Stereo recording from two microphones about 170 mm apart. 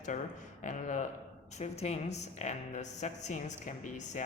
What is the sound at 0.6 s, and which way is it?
A woman's voice, 50° left (ahead or behind).